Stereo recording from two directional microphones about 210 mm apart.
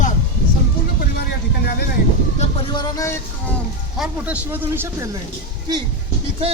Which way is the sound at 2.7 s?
20° left (ahead or behind).